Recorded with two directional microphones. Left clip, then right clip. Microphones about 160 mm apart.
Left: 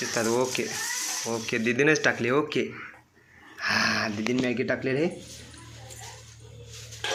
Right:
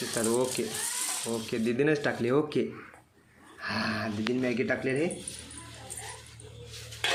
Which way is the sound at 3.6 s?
Centre (ahead or behind).